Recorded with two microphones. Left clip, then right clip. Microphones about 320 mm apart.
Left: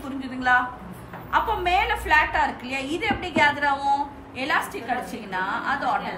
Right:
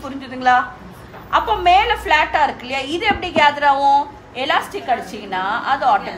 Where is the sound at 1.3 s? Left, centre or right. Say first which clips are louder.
Right 8 dB; right.